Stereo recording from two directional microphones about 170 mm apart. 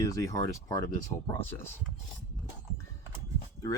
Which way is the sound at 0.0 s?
20° left (ahead or behind).